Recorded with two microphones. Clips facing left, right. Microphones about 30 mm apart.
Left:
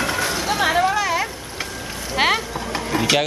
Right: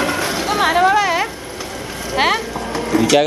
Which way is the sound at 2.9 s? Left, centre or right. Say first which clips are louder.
Right 6 dB; left.